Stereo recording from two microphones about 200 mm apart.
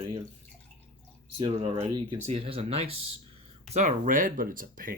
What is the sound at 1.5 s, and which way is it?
Speech, 30° right (ahead or behind).